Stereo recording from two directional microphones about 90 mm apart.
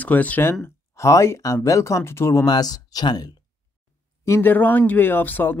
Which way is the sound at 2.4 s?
45° left (ahead or behind).